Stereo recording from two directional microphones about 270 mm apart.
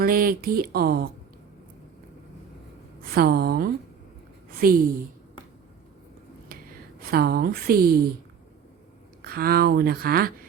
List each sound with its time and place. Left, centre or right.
0.0 s speech: right
3.2 s speech: right
6.5 s a sound: right
7.0 s speech: right
9.2 s speech: right